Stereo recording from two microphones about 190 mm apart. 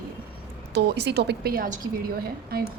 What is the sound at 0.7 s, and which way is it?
A woman's voice, 60° right (ahead or behind).